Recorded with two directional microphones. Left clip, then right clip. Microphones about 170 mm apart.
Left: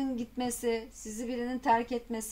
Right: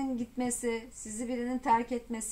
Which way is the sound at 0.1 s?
30° left (ahead or behind).